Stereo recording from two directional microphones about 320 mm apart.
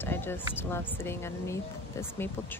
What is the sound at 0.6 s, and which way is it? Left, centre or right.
Speech, centre.